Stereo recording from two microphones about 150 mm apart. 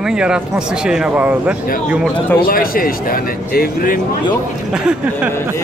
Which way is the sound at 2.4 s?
75° left (ahead or behind).